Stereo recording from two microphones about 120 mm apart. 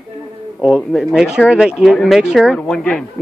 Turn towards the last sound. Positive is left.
turn(degrees=5)  # may be behind; listen again after turning